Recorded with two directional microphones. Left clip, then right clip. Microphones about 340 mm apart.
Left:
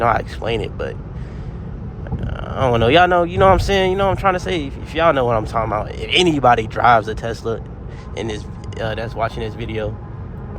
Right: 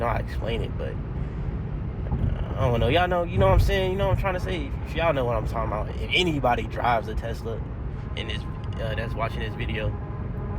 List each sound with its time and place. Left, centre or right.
0.0 s speech: left
2.6 s speech: left
8.8 s speech: left